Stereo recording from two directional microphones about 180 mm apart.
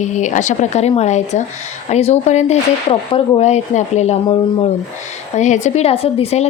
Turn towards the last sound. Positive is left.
turn(degrees=35)  # may be behind; listen again after turning